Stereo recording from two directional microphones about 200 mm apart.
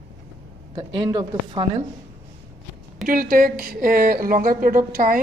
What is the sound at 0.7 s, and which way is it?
A woman's voice, 20° right (ahead or behind).